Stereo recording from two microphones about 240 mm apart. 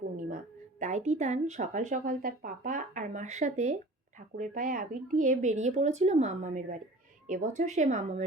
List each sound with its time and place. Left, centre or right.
0.2 s speech: right